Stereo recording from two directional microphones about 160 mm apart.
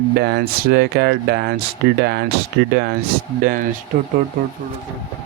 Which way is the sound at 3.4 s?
65° right (ahead or behind).